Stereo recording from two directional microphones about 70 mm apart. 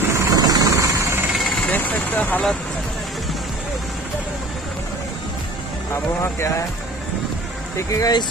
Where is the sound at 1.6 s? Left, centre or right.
Left.